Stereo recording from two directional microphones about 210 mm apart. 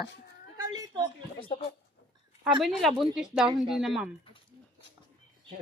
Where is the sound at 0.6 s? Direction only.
20° right (ahead or behind).